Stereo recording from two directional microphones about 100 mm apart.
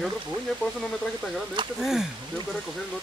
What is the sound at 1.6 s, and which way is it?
Speech, 55° right (ahead or behind).